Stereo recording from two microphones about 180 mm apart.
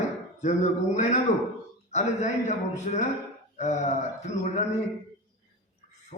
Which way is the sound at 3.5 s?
40° left (ahead or behind).